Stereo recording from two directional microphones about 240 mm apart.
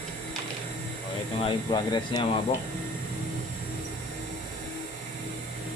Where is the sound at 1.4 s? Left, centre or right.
Centre.